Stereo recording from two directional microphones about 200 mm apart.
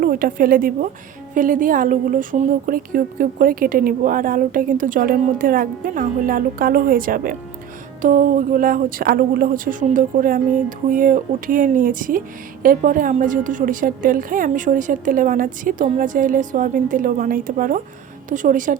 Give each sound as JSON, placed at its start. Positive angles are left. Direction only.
{"t": 0.0, "sound": "a woman's voice", "side_deg": -45}